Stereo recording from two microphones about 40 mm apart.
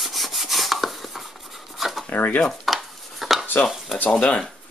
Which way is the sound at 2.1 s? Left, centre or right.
Left.